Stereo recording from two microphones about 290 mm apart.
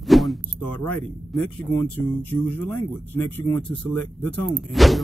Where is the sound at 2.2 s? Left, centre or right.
Centre.